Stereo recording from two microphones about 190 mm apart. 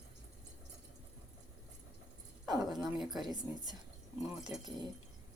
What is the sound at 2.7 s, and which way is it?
Dog, centre (ahead or behind).